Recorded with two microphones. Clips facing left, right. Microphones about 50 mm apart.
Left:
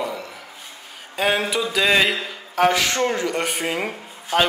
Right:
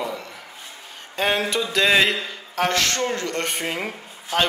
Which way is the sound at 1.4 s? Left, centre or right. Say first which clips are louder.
Even; centre.